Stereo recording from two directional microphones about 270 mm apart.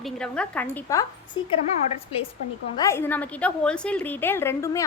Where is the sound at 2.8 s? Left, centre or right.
Centre.